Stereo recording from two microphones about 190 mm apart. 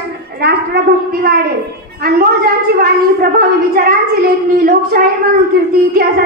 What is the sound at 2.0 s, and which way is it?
A woman's voice, 50° right (ahead or behind).